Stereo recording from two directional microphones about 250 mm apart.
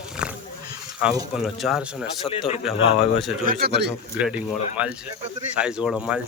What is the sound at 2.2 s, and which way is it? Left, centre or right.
Speech, left.